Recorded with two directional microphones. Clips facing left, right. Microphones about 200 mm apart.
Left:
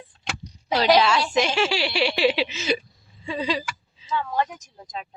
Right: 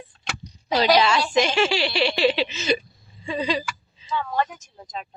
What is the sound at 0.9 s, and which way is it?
Speech, 5° left (ahead or behind).